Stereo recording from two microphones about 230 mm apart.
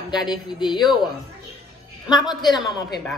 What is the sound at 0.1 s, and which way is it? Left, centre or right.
Speech, centre.